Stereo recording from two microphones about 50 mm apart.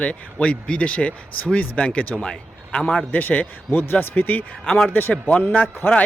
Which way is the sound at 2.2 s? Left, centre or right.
Centre.